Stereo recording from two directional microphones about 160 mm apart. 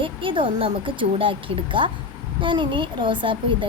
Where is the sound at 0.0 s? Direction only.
30° right (ahead or behind).